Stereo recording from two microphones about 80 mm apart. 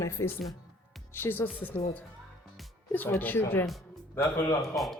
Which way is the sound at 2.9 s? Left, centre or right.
Left.